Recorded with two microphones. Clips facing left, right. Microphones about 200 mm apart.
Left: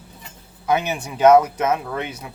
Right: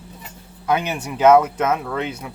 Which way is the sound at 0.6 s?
10° left (ahead or behind).